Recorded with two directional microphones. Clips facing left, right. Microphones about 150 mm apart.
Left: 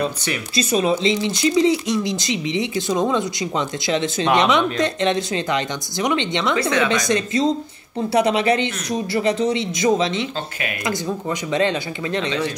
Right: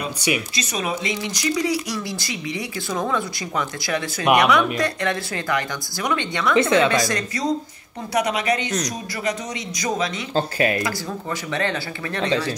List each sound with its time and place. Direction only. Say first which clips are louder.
0.6 s speech: left 7 dB; 30° left (ahead or behind)
6.5 s a woman's voice: right 4 dB; 25° right (ahead or behind)
6.9 s speech: left 2 dB; 20° left (ahead or behind)
10.3 s speech: right 7 dB; 35° right (ahead or behind)
10.8 s speech: left 3 dB; 20° left (ahead or behind)